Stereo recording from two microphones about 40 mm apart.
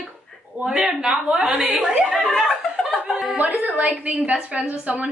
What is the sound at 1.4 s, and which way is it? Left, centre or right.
Speech, right.